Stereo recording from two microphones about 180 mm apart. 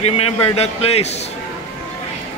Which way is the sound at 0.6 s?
35° left (ahead or behind).